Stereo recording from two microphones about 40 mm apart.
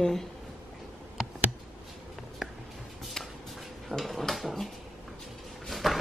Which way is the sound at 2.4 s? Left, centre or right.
Centre.